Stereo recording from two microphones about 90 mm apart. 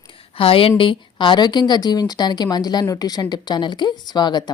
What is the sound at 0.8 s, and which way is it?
Speech, 65° left (ahead or behind).